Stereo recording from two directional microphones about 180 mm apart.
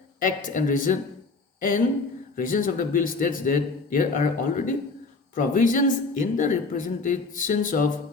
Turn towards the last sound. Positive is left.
turn(degrees=45)  # may be behind; listen again after turning